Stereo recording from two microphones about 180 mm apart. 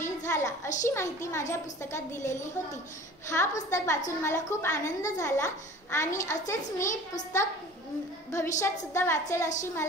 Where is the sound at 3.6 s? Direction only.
15° left (ahead or behind).